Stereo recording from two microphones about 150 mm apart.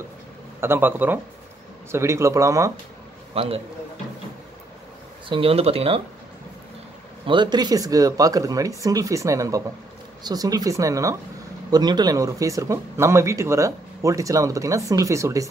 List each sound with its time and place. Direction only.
0.6 s speech: 15° right (ahead or behind)
3.3 s speech: 40° right (ahead or behind)
5.3 s speech: 40° right (ahead or behind)
7.2 s speech: 30° right (ahead or behind)